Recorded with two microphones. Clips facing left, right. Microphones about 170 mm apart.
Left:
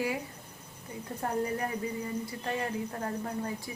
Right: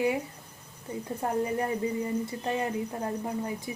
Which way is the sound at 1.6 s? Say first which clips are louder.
Right 5 dB; 25° right (ahead or behind).